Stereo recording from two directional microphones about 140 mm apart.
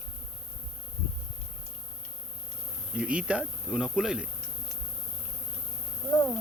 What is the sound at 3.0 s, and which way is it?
Speech, 10° right (ahead or behind).